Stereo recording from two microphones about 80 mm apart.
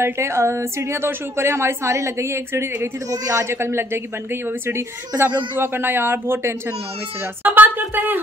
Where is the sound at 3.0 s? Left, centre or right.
Right.